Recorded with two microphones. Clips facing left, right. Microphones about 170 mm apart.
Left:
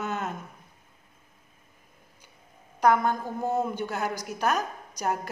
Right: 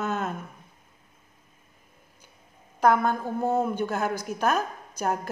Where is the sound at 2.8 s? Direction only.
50° right (ahead or behind).